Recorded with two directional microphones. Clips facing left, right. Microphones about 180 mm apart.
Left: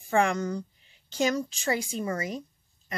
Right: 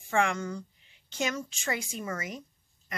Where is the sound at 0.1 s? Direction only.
35° left (ahead or behind).